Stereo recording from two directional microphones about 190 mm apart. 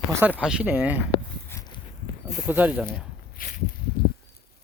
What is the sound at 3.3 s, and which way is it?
Walk, 50° left (ahead or behind).